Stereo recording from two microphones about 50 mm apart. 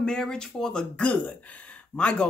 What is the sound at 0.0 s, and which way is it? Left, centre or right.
Speech, centre.